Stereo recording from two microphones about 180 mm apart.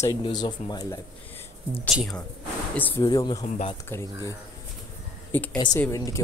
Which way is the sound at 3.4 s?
35° left (ahead or behind).